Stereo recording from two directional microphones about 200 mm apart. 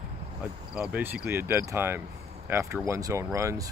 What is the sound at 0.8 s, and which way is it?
Speech, 5° right (ahead or behind).